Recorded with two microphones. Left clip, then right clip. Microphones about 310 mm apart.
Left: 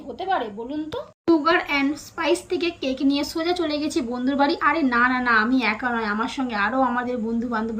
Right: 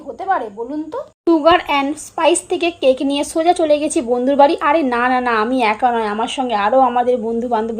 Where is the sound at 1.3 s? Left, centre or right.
Centre.